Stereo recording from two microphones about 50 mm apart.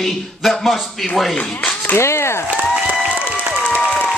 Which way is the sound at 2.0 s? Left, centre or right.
Left.